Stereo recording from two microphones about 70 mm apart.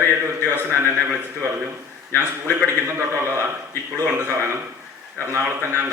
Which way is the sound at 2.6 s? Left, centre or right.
Right.